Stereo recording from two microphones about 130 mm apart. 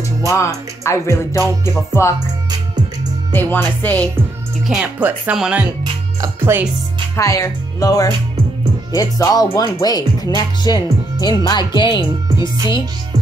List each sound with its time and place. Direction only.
0.3 s speech: 25° left (ahead or behind)
3.3 s music: 15° left (ahead or behind)
4.6 s speech: 10° right (ahead or behind)
6.2 s speech: 20° right (ahead or behind)
7.2 s speech: 25° left (ahead or behind)